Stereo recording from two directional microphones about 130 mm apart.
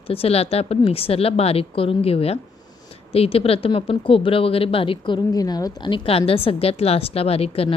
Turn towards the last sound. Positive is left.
turn(degrees=50)  # may be behind; listen again after turning